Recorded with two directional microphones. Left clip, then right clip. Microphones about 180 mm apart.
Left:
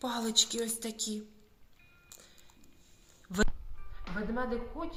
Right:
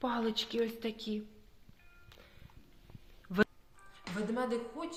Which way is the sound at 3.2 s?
15° right (ahead or behind).